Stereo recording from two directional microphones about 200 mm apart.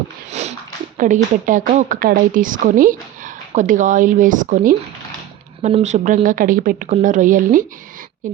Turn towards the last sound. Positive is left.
turn(degrees=-40)  # may be behind; listen again after turning